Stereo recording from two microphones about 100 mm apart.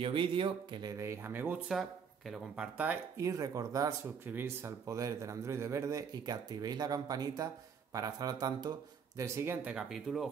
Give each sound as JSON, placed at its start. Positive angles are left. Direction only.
{"t": 0.0, "sound": "speech", "side_deg": -60}
{"t": 0.9, "sound": "speech", "side_deg": -25}
{"t": 1.7, "sound": "speech", "side_deg": 0}
{"t": 3.2, "sound": "a man's voice", "side_deg": -35}
{"t": 4.3, "sound": "a man's voice", "side_deg": -25}
{"t": 9.7, "sound": "speech", "side_deg": -5}